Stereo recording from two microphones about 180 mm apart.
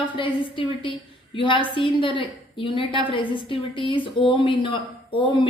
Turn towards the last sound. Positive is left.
turn(degrees=25)  # may be behind; listen again after turning